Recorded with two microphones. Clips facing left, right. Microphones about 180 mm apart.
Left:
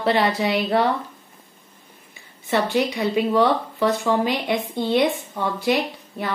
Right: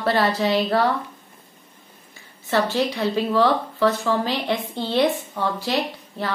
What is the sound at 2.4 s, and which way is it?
Speech, 15° left (ahead or behind).